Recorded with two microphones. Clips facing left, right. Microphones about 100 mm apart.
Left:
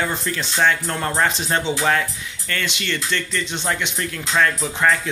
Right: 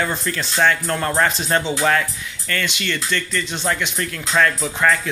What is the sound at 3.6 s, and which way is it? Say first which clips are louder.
Speech: right 3 dB; 15° left (ahead or behind).